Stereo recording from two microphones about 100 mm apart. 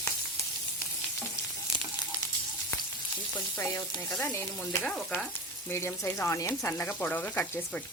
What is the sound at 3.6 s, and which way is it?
Speech, 30° left (ahead or behind).